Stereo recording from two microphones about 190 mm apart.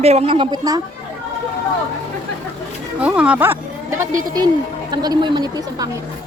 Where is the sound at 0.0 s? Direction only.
35° right (ahead or behind).